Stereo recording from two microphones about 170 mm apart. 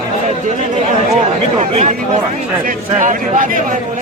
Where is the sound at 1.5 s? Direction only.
35° right (ahead or behind).